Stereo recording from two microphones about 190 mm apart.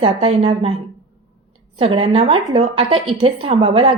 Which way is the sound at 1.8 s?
30° right (ahead or behind).